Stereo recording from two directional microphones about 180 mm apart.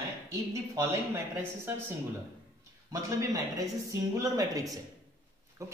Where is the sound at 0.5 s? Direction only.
15° right (ahead or behind).